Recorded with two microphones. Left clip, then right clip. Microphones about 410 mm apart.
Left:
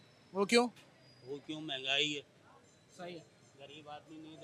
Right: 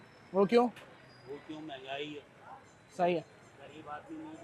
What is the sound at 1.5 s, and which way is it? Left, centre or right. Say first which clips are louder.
Speech: left 7 dB; left.